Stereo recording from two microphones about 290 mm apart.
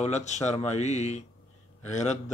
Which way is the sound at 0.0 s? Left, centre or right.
Left.